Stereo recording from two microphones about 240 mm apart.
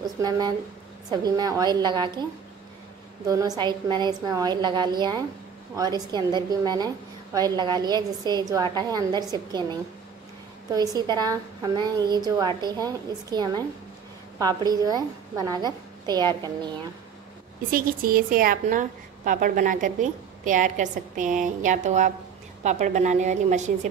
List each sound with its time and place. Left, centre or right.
0.0 s a woman's voice: centre
3.3 s a woman's voice: centre
17.6 s a woman's voice: right